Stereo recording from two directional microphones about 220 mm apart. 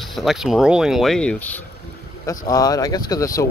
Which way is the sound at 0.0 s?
Centre (ahead or behind).